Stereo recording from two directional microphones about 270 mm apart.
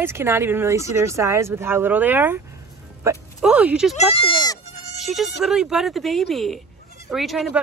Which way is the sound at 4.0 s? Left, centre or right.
Left.